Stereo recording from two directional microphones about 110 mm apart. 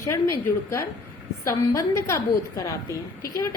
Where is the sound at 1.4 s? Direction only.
25° left (ahead or behind).